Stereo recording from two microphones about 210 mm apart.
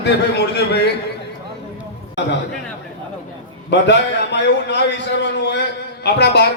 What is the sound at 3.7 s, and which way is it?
A man's voice, 55° left (ahead or behind).